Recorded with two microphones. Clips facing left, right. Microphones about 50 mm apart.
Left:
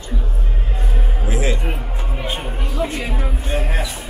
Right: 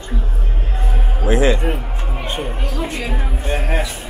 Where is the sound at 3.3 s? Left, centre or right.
Right.